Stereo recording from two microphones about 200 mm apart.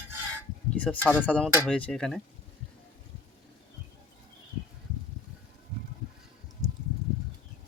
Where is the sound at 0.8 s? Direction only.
10° left (ahead or behind).